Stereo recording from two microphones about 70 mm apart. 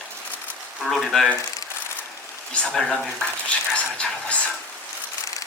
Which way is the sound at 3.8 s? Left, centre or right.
Centre.